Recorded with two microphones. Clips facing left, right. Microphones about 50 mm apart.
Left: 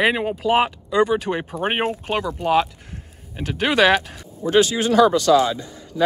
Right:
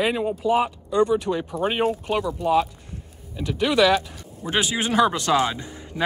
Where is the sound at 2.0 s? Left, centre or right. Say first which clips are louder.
Left 1 dB; left.